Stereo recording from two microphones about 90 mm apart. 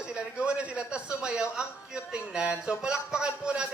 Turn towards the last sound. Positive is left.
turn(degrees=-10)  # may be behind; listen again after turning